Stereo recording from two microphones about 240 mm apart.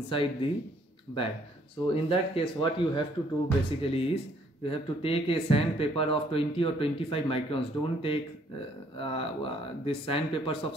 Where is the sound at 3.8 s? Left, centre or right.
Left.